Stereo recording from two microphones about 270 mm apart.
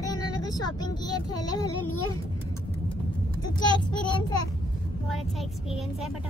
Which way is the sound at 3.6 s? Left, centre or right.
Centre.